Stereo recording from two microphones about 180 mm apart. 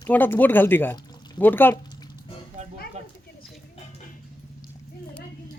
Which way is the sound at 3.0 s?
40° right (ahead or behind).